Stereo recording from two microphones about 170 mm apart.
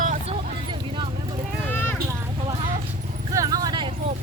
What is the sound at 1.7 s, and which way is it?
Clip-clop, 10° left (ahead or behind).